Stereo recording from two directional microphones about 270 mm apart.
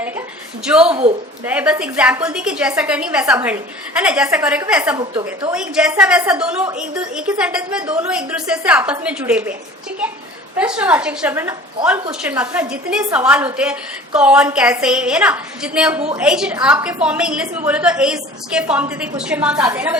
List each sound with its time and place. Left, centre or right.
0.6 s a woman's voice: centre
4.9 s a woman's voice: centre
5.5 s a woman's voice: centre
10.6 s a woman's voice: centre